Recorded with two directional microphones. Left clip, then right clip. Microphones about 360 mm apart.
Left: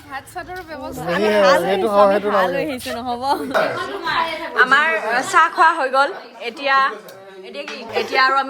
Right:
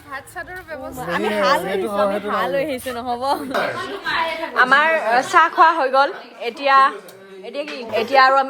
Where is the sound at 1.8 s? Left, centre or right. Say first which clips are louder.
Left 6 dB; centre.